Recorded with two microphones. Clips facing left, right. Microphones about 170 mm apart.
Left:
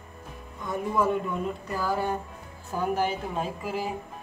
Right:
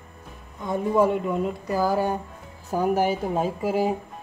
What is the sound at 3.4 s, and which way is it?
Speech, 40° right (ahead or behind).